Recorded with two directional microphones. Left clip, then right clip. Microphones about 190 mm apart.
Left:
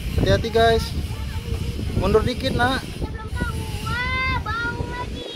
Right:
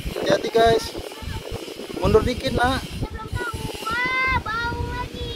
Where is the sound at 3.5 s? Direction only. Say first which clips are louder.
Right 2 dB; 60° right (ahead or behind).